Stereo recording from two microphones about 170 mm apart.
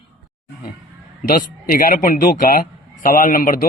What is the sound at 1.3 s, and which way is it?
A man's voice, 55° left (ahead or behind).